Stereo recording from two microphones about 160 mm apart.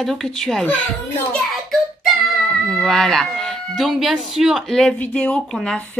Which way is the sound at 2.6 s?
5° left (ahead or behind).